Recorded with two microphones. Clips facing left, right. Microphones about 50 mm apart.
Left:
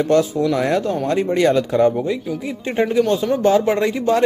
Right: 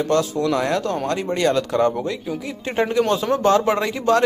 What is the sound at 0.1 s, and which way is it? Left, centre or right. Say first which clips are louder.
Speech: left 2 dB; left.